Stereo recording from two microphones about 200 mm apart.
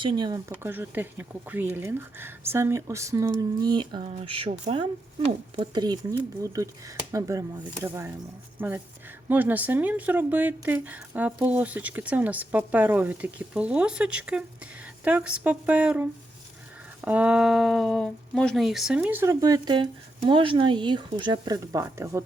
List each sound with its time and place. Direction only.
0.0 s speech: 25° right (ahead or behind)